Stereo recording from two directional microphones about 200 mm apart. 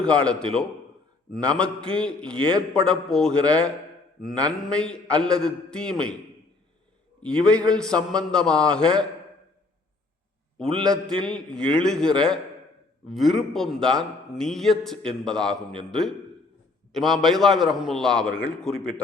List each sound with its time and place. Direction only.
0.0 s a man's voice: 5° left (ahead or behind)
2.4 s a man's voice: 25° right (ahead or behind)
2.8 s a man's voice: 5° left (ahead or behind)
7.2 s a man's voice: 5° left (ahead or behind)
10.6 s a man's voice: centre (ahead or behind)